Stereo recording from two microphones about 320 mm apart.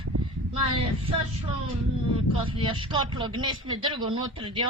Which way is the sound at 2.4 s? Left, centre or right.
Centre.